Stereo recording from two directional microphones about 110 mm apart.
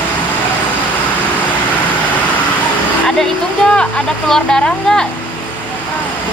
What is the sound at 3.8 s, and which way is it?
Speech, 5° left (ahead or behind).